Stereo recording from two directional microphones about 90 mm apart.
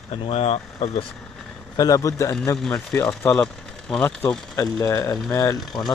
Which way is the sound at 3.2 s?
15° left (ahead or behind).